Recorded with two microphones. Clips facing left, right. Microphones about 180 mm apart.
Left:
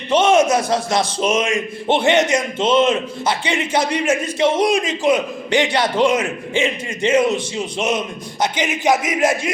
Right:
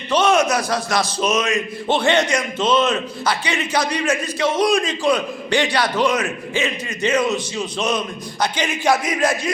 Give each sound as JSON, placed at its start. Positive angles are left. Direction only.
{"t": 0.1, "sound": "a man's voice", "side_deg": 25}